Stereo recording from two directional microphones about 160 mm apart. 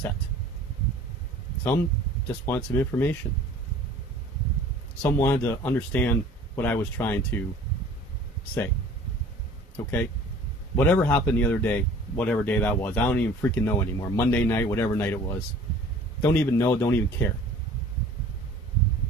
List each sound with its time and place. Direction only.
2.2 s speech: 15° left (ahead or behind)
5.0 s speech: 15° left (ahead or behind)
9.8 s speech: 15° left (ahead or behind)